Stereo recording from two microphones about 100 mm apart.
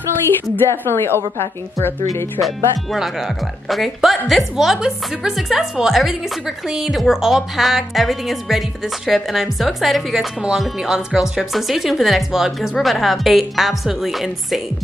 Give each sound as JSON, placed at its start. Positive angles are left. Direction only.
{"t": 0.6, "sound": "a woman's voice", "side_deg": 25}
{"t": 2.4, "sound": "speech", "side_deg": 0}